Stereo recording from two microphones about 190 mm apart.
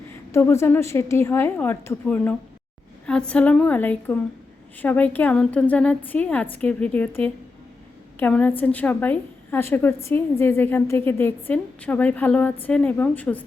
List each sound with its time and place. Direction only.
0.3 s a woman's voice: 15° left (ahead or behind)